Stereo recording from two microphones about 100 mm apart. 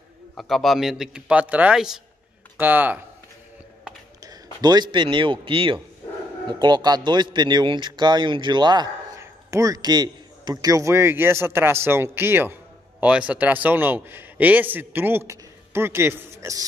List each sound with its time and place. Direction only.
0.4 s speech: centre (ahead or behind)
2.5 s speech: 20° right (ahead or behind)
4.2 s a man's voice: 40° right (ahead or behind); by 5.8 s 60° right (ahead or behind)
6.6 s a man's voice: 45° right (ahead or behind)
9.2 s a man's voice: 35° right (ahead or behind)